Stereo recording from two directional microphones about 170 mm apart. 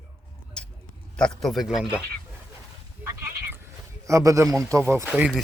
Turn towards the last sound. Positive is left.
turn(degrees=-10)  # may be behind; listen again after turning